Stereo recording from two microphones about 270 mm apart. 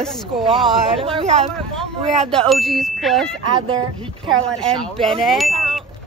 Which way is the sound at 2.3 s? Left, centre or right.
Centre.